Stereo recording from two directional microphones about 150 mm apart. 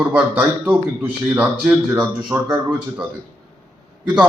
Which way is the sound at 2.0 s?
25° right (ahead or behind).